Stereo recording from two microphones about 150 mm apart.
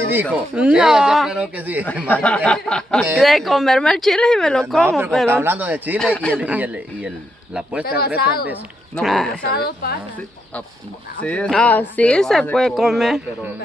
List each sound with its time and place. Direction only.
0.0 s speech: 10° right (ahead or behind)
2.0 s speech: 10° left (ahead or behind)
5.3 s speech: 15° right (ahead or behind)
5.9 s speech: 5° left (ahead or behind)
6.4 s speech: 10° right (ahead or behind)
7.8 s a woman's voice: 90° left
8.9 s speech: centre (ahead or behind)
9.6 s a woman's voice: 90° left
11.2 s speech: 5° left (ahead or behind)